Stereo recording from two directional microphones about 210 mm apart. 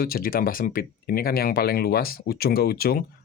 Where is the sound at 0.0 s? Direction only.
45° left (ahead or behind).